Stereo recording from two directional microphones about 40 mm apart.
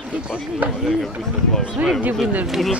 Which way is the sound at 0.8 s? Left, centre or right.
Centre.